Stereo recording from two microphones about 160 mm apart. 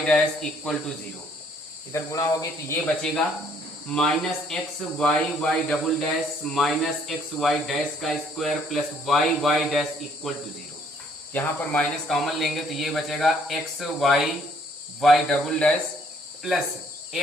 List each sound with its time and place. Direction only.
0.0 s speech: 5° left (ahead or behind)
1.9 s speech: 20° left (ahead or behind)
3.8 s speech: 5° left (ahead or behind)